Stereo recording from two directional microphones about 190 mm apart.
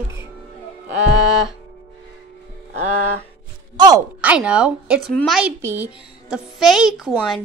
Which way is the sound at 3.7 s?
20° right (ahead or behind).